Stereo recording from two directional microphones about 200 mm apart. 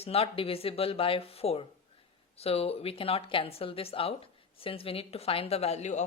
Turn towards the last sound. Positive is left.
turn(degrees=35)  # may be behind; listen again after turning